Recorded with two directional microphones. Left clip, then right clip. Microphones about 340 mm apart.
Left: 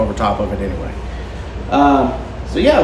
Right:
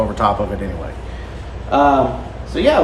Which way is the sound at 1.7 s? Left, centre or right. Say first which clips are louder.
Even; centre.